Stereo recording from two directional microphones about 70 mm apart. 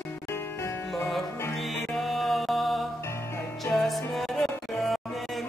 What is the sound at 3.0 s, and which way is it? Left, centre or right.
Music, left.